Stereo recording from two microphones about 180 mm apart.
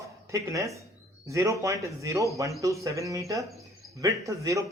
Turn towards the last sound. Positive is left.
turn(degrees=-15)  # may be behind; listen again after turning